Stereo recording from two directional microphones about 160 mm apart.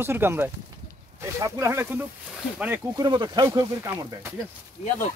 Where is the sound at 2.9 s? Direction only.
25° right (ahead or behind).